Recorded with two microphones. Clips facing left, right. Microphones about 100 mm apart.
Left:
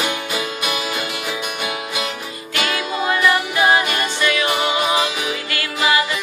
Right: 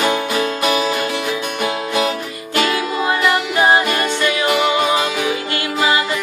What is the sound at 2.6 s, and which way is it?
Music, 30° right (ahead or behind).